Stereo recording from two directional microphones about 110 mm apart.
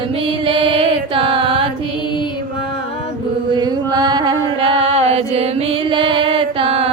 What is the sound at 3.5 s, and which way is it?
Chant, 40° right (ahead or behind).